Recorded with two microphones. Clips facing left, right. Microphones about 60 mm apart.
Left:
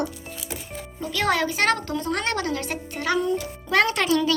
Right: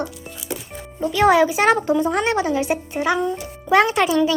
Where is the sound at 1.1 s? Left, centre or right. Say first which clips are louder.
Right 8 dB; centre.